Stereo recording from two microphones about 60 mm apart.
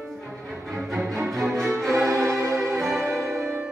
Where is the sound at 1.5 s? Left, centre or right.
Centre.